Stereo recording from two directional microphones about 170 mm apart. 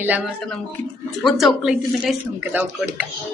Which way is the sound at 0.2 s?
5° left (ahead or behind).